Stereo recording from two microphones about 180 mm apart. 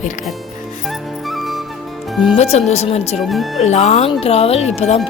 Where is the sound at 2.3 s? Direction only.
35° left (ahead or behind).